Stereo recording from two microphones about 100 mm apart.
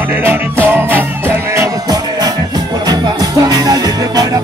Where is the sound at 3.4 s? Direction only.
40° right (ahead or behind).